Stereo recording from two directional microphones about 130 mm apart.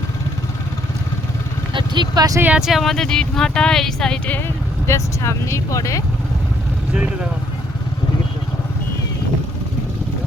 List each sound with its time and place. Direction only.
1.7 s vehicle: 35° right (ahead or behind)
2.4 s speech: 10° right (ahead or behind)
4.9 s speech: 25° left (ahead or behind)
6.9 s speech: 10° right (ahead or behind)